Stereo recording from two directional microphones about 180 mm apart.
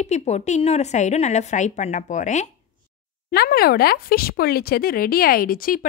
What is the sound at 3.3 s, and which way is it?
Speech, 60° left (ahead or behind).